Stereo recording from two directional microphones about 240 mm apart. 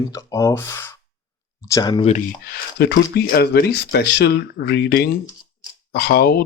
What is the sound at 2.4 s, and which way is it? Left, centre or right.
Speech, left.